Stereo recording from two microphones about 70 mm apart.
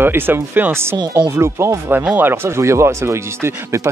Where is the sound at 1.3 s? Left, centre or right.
Right.